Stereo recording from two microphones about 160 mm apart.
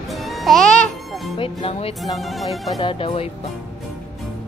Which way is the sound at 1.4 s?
35° left (ahead or behind).